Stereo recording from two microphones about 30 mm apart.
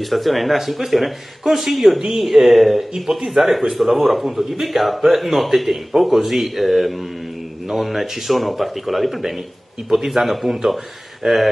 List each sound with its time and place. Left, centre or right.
0.0 s speech: centre
2.9 s speech: right
3.3 s speech: centre
9.8 s speech: centre